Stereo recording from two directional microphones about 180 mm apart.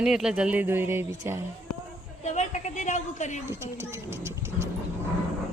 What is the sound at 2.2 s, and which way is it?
A woman's voice, 40° left (ahead or behind).